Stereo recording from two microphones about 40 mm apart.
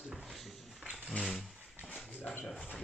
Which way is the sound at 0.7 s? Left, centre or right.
Centre.